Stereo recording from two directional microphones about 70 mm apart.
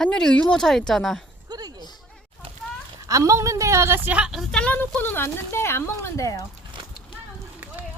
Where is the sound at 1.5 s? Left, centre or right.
Right.